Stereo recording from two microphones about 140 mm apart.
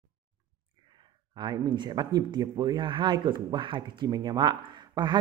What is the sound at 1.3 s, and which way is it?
Speech, 30° right (ahead or behind).